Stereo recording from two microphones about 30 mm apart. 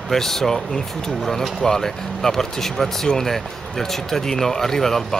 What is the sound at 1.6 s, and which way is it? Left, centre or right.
Speech, centre.